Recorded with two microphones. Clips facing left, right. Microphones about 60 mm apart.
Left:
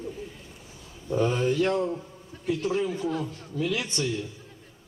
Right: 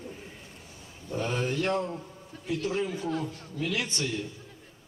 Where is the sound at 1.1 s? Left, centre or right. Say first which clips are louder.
Left 7 dB; left.